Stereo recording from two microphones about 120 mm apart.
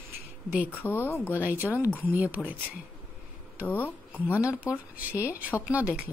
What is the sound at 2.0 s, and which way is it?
Speech, 15° right (ahead or behind).